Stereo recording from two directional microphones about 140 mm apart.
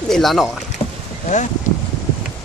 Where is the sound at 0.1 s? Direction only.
Centre (ahead or behind).